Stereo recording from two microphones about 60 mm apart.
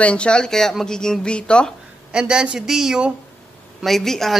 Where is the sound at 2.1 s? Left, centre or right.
Centre.